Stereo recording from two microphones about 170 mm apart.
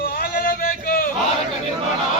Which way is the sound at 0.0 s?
60° left (ahead or behind).